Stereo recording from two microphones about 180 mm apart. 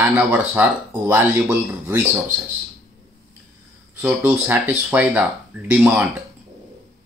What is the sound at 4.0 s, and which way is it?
Speech, 10° right (ahead or behind).